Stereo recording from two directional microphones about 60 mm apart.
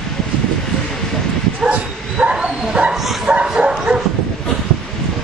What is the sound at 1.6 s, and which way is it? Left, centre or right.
Bow-wow, centre.